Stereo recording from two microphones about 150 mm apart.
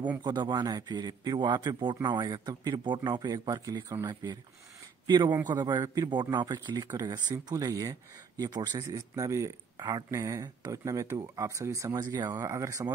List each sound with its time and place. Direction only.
0.2 s speech: 30° right (ahead or behind)